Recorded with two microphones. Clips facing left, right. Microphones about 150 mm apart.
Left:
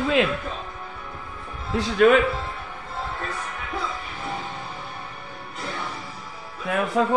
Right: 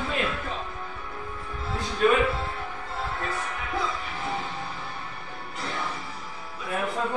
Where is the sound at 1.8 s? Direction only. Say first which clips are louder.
Left 6 dB; 85° left.